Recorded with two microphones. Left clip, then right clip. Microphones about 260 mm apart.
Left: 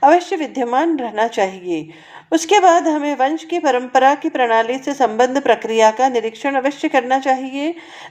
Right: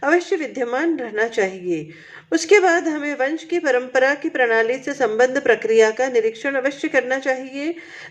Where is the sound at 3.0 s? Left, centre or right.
Left.